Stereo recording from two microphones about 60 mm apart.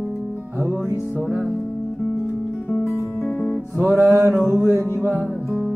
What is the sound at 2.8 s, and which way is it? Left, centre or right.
Music, left.